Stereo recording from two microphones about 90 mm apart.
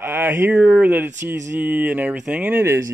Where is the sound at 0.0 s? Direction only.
25° right (ahead or behind).